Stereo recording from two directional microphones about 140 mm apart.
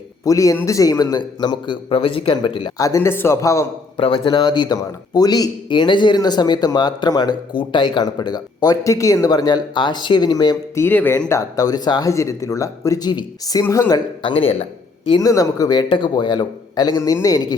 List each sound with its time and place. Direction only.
0.3 s a man's voice: 25° left (ahead or behind)
2.7 s speech: 25° left (ahead or behind)
3.9 s a man's voice: 35° left (ahead or behind)
10.8 s speech: 15° left (ahead or behind)
14.2 s speech: 40° left (ahead or behind)
15.2 s speech: 25° left (ahead or behind)